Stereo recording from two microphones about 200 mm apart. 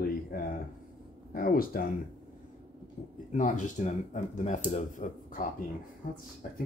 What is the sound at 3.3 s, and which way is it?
Speech, 40° left (ahead or behind).